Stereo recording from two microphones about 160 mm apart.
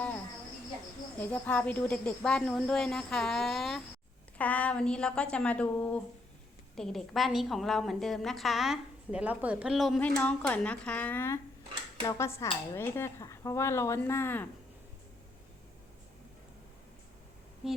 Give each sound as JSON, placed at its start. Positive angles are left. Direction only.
{"t": 1.2, "sound": "a woman's voice", "side_deg": 10}
{"t": 10.0, "sound": "speech", "side_deg": 10}
{"t": 17.6, "sound": "a woman's voice", "side_deg": -5}